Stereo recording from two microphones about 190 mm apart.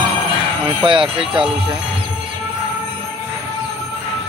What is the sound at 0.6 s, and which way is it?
Speech, 25° right (ahead or behind).